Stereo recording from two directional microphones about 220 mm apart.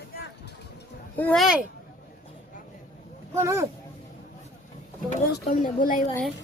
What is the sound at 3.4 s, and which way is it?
Speech, 15° right (ahead or behind).